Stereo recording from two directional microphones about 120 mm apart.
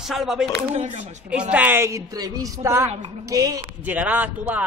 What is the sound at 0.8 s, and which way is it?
Speech, 85° right.